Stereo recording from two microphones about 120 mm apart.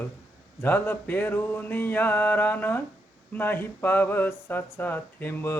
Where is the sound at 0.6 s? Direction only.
15° left (ahead or behind).